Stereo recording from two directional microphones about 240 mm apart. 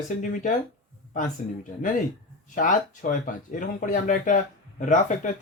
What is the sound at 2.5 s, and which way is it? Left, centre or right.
Speech, left.